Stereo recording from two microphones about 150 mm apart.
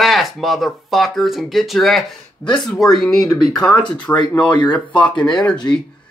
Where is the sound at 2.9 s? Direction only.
Centre (ahead or behind).